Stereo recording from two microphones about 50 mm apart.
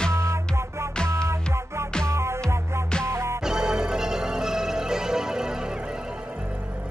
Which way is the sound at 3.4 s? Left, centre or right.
Centre.